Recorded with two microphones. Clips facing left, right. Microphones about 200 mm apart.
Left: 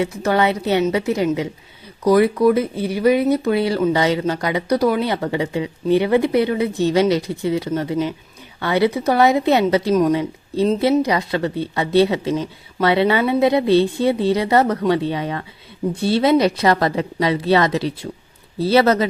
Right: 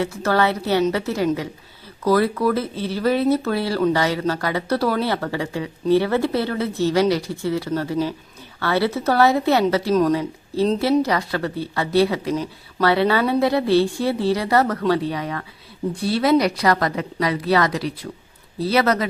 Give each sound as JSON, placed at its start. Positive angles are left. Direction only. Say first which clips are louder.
{"t": 0.0, "sound": "speech", "louder": "left 2 dB", "side_deg": 15}